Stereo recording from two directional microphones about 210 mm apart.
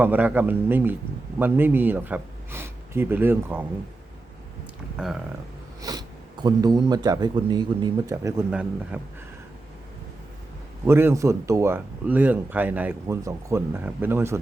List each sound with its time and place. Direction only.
0.0 s speech: 10° right (ahead or behind)
4.9 s speech: 5° right (ahead or behind)
5.8 s speech: 20° right (ahead or behind)
10.8 s speech: 10° right (ahead or behind)